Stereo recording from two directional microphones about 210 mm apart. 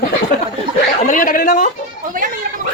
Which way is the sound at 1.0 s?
40° left (ahead or behind).